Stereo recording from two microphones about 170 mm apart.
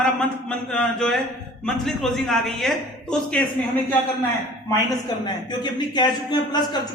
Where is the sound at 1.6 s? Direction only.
5° left (ahead or behind).